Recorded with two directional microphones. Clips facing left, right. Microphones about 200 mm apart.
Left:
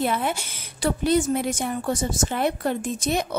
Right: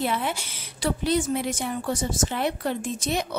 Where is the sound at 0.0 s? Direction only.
50° left (ahead or behind).